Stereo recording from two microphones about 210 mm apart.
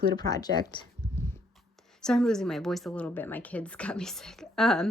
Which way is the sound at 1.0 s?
20° left (ahead or behind).